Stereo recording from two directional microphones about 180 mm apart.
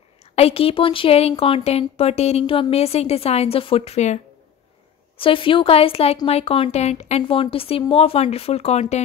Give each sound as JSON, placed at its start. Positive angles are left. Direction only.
{"t": 0.2, "sound": "speech", "side_deg": 35}